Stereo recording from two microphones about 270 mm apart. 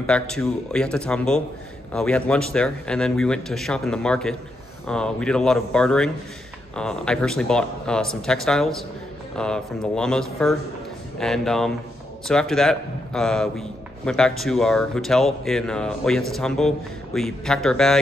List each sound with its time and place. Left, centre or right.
0.0 s a man's voice: centre